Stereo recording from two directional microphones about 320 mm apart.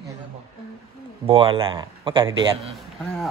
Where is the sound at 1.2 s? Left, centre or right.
Centre.